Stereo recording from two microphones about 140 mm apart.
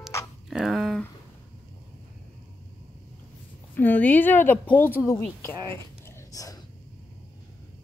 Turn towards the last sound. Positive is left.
turn(degrees=25)  # may be behind; listen again after turning